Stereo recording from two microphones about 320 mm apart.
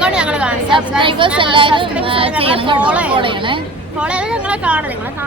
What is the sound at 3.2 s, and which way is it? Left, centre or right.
Speech, centre.